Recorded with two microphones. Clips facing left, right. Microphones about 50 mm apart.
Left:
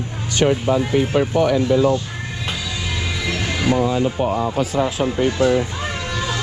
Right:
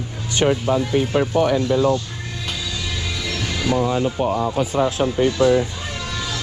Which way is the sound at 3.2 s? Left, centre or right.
Centre.